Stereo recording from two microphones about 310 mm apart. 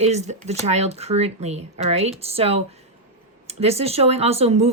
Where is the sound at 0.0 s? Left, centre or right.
Right.